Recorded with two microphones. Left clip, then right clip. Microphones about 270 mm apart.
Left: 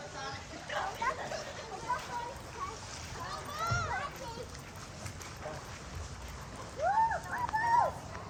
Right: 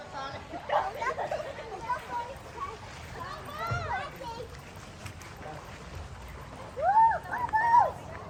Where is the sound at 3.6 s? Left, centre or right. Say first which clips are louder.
Right 1 dB; right.